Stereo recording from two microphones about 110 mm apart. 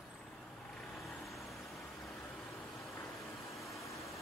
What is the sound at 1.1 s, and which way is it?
Vehicle, centre (ahead or behind).